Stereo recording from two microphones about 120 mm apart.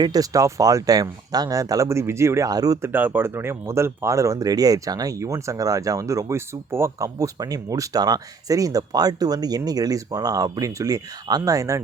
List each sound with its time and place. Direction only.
0.0 s speech: 30° right (ahead or behind)
2.9 s speech: 15° right (ahead or behind)